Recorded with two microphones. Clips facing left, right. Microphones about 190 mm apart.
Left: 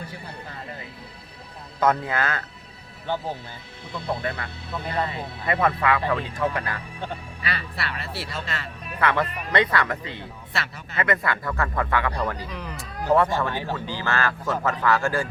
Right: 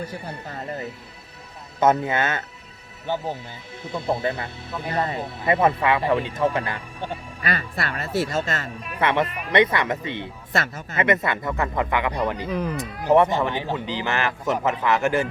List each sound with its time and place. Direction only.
1.8 s speech: 25° right (ahead or behind)
4.2 s speech: 25° right (ahead or behind)
4.9 s speech: 45° right (ahead or behind)
5.5 s speech: 25° right (ahead or behind)
7.4 s speech: 45° right (ahead or behind)
9.0 s speech: 20° right (ahead or behind)
10.5 s speech: 45° right (ahead or behind)
10.9 s speech: 20° right (ahead or behind)
12.5 s speech: 45° right (ahead or behind)
12.7 s speech: 20° right (ahead or behind)